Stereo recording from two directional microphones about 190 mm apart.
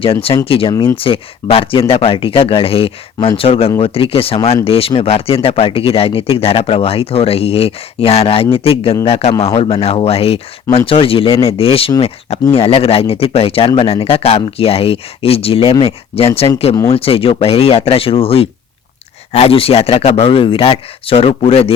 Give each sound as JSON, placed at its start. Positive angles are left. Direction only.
{"t": 0.0, "sound": "speech", "side_deg": 30}
{"t": 0.7, "sound": "speech", "side_deg": 20}
{"t": 0.9, "sound": "speech", "side_deg": 30}